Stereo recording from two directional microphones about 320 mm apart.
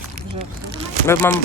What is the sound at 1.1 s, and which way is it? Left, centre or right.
Speech, centre.